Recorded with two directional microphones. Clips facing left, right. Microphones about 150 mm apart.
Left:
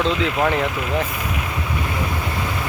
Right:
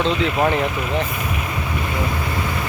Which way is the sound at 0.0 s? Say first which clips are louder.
Right 1 dB; centre (ahead or behind).